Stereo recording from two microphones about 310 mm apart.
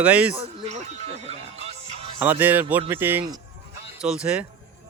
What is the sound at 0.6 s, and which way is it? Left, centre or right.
Speech, right.